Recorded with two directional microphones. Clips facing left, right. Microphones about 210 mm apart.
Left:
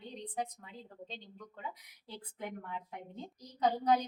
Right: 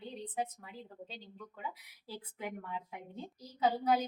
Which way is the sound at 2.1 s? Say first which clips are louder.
Right 1 dB; 5° right (ahead or behind).